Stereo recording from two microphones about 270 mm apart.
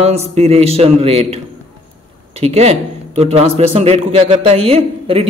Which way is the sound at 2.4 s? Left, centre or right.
Right.